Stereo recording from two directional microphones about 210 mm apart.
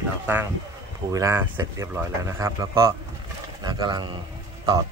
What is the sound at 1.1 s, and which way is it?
Speech, 15° right (ahead or behind).